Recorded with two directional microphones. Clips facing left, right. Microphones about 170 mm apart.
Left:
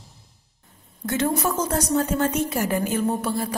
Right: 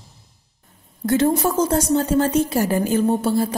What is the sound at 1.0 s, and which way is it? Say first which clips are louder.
A woman's voice: right 5 dB; 35° right (ahead or behind).